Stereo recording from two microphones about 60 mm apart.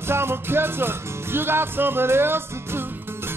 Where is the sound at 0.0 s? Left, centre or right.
Right.